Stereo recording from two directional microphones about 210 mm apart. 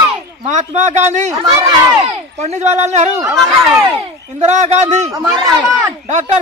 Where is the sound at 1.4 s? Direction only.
20° right (ahead or behind).